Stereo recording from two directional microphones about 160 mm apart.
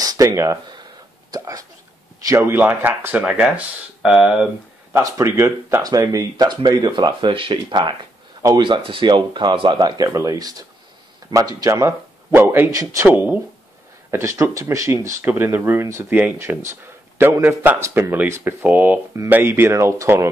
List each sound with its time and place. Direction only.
0.0 s a sound: 20° right (ahead or behind)
1.3 s speech: 20° right (ahead or behind); by 4.5 s 5° right (ahead or behind)
4.9 s speech: 20° right (ahead or behind)